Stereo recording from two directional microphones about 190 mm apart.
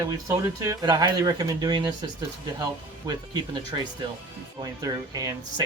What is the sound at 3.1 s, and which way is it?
Speech, 20° right (ahead or behind).